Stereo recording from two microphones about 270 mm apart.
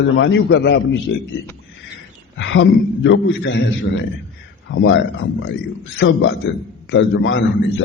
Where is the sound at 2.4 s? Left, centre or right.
Left.